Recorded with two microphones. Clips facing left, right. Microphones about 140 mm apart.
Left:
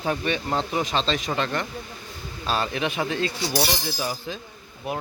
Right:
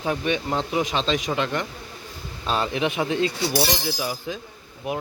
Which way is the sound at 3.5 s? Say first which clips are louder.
Right 2 dB; 5° right (ahead or behind).